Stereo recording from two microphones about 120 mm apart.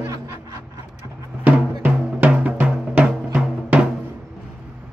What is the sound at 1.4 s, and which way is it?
Drum, 15° right (ahead or behind).